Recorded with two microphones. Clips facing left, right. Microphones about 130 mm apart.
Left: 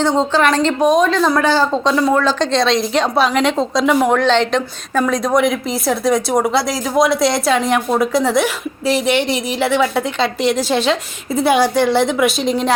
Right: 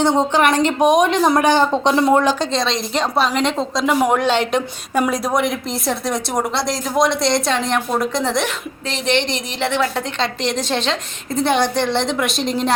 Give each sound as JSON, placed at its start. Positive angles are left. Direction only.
{"t": 0.2, "sound": "a woman's voice", "side_deg": -15}
{"t": 2.4, "sound": "a woman's voice", "side_deg": 0}